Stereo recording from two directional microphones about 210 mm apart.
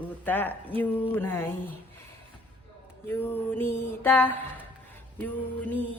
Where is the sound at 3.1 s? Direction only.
10° left (ahead or behind).